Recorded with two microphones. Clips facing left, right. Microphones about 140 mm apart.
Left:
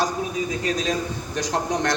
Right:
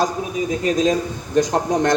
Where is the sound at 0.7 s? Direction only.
45° right (ahead or behind).